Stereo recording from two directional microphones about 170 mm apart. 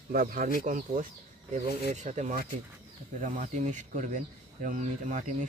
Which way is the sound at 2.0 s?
45° right (ahead or behind).